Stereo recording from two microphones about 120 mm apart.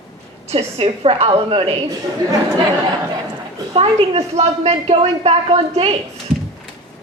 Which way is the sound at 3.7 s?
55° right (ahead or behind).